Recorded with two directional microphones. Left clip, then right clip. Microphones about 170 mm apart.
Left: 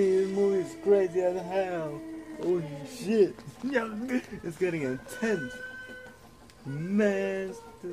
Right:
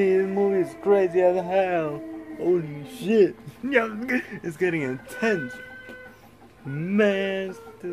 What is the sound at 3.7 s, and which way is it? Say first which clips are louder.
Speech: right 7 dB; 15° right (ahead or behind).